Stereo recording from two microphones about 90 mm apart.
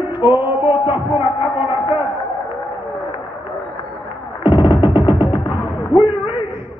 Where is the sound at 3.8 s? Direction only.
30° right (ahead or behind).